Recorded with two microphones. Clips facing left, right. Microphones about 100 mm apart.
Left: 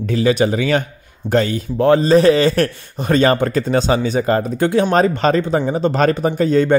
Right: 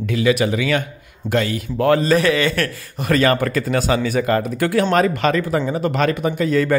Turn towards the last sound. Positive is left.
turn(degrees=30)  # may be behind; listen again after turning